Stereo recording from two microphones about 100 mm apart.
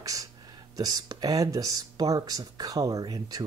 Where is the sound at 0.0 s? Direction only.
35° right (ahead or behind).